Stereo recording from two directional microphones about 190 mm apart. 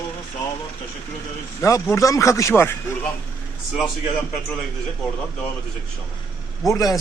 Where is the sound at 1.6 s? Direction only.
15° left (ahead or behind).